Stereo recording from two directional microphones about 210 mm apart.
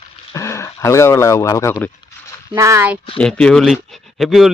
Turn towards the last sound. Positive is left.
turn(degrees=0)  # may be behind; listen again after turning